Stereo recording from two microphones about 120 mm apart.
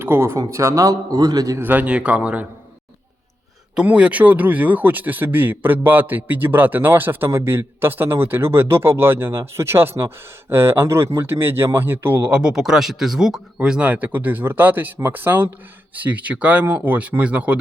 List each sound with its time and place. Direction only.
0.0 s a man's voice: 20° right (ahead or behind)
1.5 s speech: 15° right (ahead or behind)
3.8 s speech: 10° right (ahead or behind)